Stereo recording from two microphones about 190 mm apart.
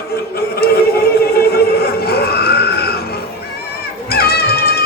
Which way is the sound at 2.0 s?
55° left (ahead or behind).